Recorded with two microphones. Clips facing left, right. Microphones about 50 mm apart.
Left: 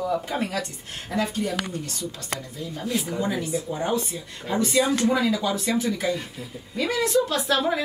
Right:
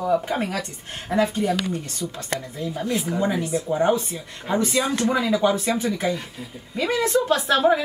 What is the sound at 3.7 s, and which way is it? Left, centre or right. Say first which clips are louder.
Speech: right 8 dB; right.